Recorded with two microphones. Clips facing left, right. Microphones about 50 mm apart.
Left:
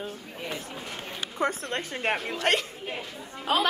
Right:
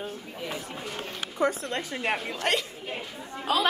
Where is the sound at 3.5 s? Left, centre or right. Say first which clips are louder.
Left 1 dB; left.